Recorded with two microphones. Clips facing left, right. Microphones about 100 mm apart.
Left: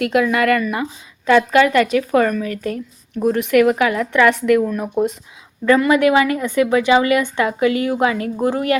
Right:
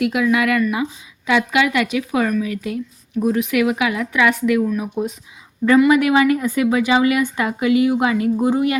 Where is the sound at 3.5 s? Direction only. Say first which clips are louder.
Left 4 dB; 45° left (ahead or behind).